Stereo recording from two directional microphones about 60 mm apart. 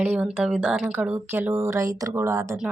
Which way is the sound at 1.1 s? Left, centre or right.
Right.